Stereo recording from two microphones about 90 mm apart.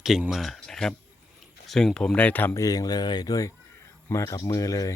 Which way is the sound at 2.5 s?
40° left (ahead or behind).